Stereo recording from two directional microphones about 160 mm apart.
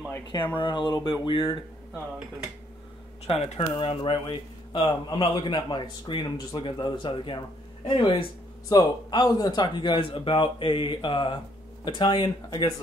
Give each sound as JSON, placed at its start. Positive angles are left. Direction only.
{"t": 0.1, "sound": "speech", "side_deg": 15}
{"t": 0.6, "sound": "speech", "side_deg": 30}
{"t": 3.3, "sound": "speech", "side_deg": 35}
{"t": 8.6, "sound": "speech", "side_deg": 25}